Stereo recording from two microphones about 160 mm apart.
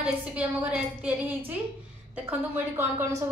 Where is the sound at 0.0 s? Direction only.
10° right (ahead or behind).